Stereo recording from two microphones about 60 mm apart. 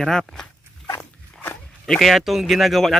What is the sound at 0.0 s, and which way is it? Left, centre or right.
Speech, centre.